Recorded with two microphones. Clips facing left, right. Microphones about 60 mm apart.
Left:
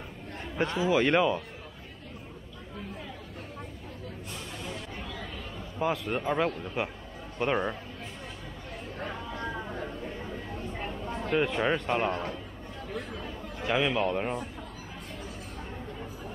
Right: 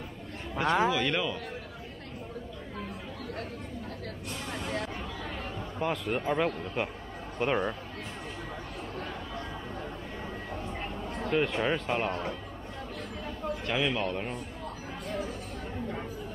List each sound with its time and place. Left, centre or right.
0.7 s speech: right
0.9 s speech: left
5.8 s a man's voice: centre
10.8 s a sound: centre
11.3 s a man's voice: centre
13.7 s a man's voice: centre